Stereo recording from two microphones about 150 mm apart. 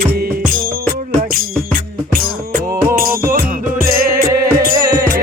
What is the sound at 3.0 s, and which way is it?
Music, 70° right (ahead or behind).